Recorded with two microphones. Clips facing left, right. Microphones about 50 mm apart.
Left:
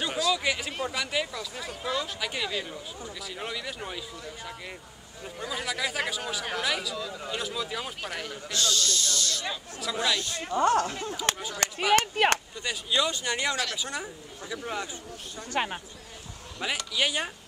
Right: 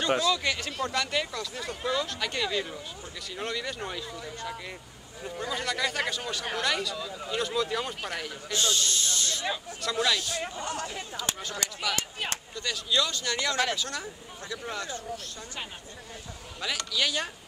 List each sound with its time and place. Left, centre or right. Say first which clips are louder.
0.3 s speech: left 1 dB; centre
8.5 s speech: even; right
9.8 s speech: right 1 dB; centre
10.5 s speech: left 11 dB; left
11.3 s speech: even; centre
11.9 s speech: left 10 dB; left
12.5 s speech: even; centre
15.5 s speech: left 12 dB; left
16.5 s speech: left 1 dB; left